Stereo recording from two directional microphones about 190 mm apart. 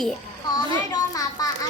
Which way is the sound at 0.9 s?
20° left (ahead or behind).